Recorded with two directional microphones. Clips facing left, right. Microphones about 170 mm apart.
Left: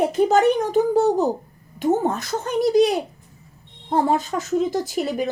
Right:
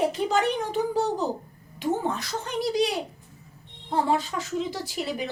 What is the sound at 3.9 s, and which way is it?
A child's voice, 45° left (ahead or behind).